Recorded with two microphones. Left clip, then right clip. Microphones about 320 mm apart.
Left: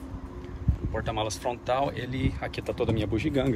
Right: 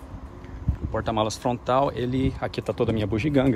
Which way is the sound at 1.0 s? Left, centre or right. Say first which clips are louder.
Right 5 dB; centre.